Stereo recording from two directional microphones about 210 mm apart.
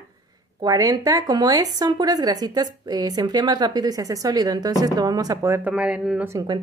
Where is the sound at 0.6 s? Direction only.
15° right (ahead or behind).